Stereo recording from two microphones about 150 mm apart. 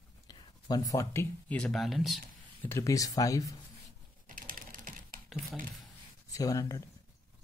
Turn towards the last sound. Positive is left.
turn(degrees=25)  # may be behind; listen again after turning